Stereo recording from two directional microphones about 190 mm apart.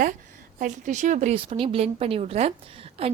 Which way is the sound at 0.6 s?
40° right (ahead or behind).